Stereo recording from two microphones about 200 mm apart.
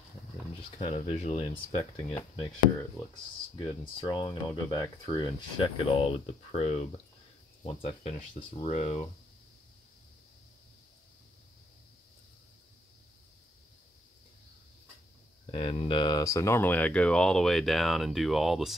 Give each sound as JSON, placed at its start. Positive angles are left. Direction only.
{"t": 0.7, "sound": "speech", "side_deg": 30}
{"t": 15.5, "sound": "speech", "side_deg": 30}